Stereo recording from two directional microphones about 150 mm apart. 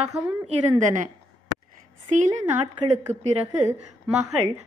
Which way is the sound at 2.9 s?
45° right (ahead or behind).